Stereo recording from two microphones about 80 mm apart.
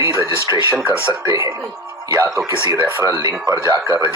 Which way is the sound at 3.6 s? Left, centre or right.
Right.